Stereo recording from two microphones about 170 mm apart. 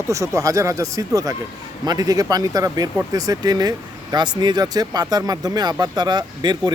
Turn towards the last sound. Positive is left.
turn(degrees=-25)  # may be behind; listen again after turning